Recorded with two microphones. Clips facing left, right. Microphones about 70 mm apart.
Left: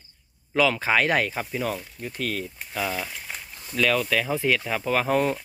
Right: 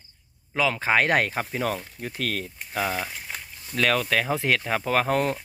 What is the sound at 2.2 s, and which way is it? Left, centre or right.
Speech, right.